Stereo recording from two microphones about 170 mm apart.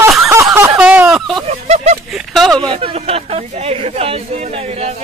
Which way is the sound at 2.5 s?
30° right (ahead or behind).